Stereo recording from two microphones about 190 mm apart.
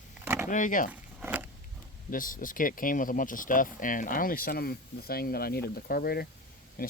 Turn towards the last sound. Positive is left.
turn(degrees=50)  # may be behind; listen again after turning